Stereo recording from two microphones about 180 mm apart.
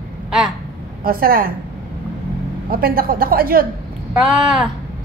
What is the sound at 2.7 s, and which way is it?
Speech, 55° right (ahead or behind).